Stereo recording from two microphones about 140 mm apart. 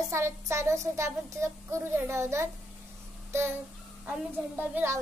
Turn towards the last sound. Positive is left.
turn(degrees=-15)  # may be behind; listen again after turning